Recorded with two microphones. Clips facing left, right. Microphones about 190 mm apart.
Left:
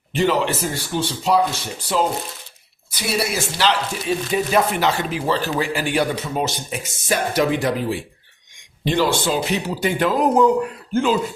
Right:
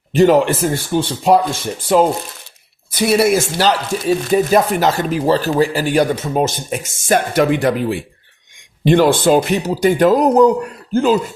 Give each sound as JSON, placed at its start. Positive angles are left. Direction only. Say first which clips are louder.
{"t": 0.1, "sound": "speech", "louder": "right 8 dB", "side_deg": -45}